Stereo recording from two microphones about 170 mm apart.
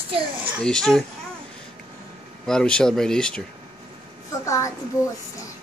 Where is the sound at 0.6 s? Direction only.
5° left (ahead or behind).